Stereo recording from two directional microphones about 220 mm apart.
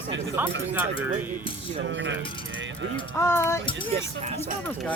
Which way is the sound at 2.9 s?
10° left (ahead or behind).